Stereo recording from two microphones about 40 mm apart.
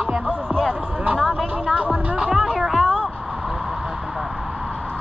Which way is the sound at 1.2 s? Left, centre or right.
Centre.